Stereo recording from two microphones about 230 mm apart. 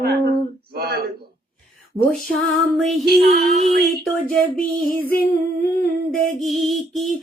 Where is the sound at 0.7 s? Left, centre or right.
Right.